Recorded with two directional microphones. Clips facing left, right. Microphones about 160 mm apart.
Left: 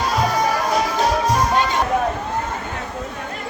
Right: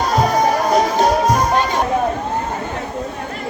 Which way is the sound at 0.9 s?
45° right (ahead or behind).